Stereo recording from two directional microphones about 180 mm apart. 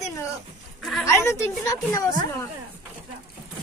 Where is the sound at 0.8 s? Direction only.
Centre (ahead or behind).